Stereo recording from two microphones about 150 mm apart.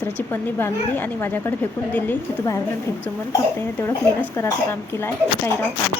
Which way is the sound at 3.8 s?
15° left (ahead or behind).